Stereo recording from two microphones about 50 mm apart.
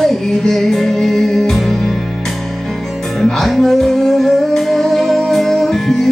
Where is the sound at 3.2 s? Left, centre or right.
Centre.